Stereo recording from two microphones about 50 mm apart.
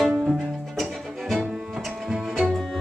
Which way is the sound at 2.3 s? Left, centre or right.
Centre.